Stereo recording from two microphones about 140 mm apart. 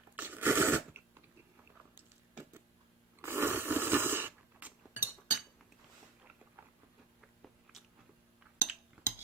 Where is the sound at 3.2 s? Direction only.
15° right (ahead or behind).